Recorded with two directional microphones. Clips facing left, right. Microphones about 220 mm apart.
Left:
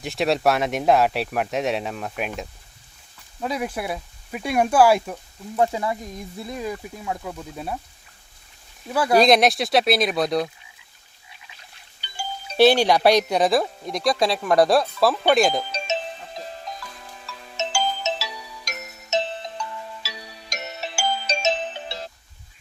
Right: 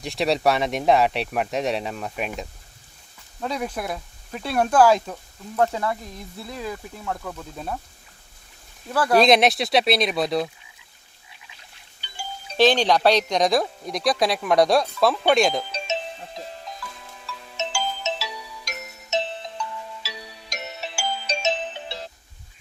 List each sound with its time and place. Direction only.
0.0 s speech: centre (ahead or behind)
8.9 s speech: 10° left (ahead or behind)
9.1 s speech: centre (ahead or behind)
12.5 s speech: 10° left (ahead or behind)
16.7 s music: 40° left (ahead or behind)
17.2 s ringtone: 45° left (ahead or behind)
19.1 s music: 45° left (ahead or behind)